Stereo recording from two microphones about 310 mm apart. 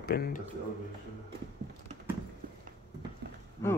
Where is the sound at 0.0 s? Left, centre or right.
Left.